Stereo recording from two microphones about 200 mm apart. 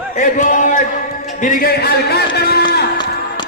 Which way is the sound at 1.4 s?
45° left (ahead or behind).